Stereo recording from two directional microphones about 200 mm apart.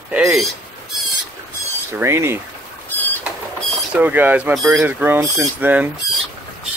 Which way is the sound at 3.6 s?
Centre (ahead or behind).